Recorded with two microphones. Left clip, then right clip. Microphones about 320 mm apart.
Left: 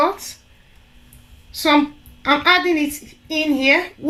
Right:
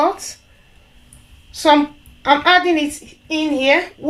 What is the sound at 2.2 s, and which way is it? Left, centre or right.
Speech, right.